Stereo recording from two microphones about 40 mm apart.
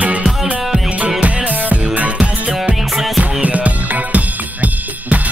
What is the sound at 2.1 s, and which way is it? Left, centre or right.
Music, right.